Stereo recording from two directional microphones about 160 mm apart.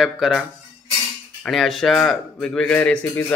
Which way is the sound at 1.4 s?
Centre (ahead or behind).